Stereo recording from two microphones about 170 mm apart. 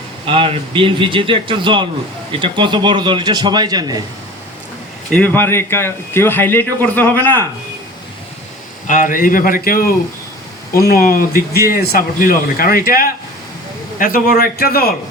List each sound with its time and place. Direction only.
0.3 s a man's voice: 30° right (ahead or behind)
5.1 s a man's voice: 10° left (ahead or behind)
8.9 s speech: 50° left (ahead or behind)